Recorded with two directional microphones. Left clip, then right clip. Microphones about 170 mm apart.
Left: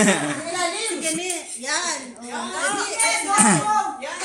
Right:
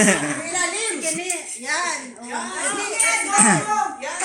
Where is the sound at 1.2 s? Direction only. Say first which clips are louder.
Even; 60° left (ahead or behind).